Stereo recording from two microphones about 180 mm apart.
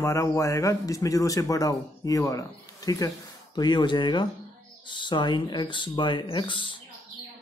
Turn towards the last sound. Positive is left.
turn(degrees=25)  # may be behind; listen again after turning